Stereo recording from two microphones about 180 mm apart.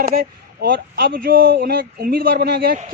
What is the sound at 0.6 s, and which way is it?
Speech, 55° right (ahead or behind).